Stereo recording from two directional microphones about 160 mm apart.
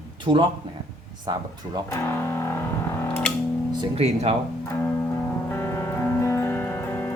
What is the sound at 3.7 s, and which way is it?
Music, 25° right (ahead or behind).